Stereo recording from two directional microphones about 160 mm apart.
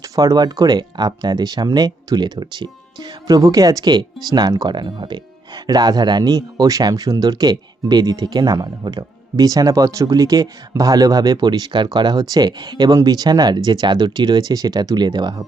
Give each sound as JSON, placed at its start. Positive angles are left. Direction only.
{"t": 0.0, "sound": "speech", "side_deg": -20}